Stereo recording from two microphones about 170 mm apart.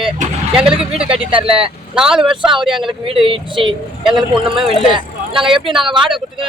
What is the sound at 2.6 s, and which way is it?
Speech, 30° right (ahead or behind).